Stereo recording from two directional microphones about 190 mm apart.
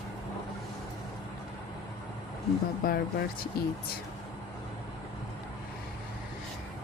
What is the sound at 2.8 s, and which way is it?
Speech, 55° left (ahead or behind).